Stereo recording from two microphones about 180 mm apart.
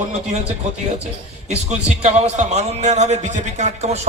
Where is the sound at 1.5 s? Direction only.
40° right (ahead or behind).